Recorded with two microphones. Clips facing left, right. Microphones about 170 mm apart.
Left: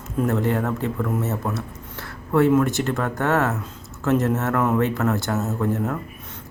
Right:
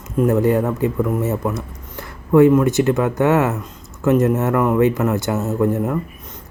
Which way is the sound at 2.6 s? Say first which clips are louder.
Right 6 dB; 15° right (ahead or behind).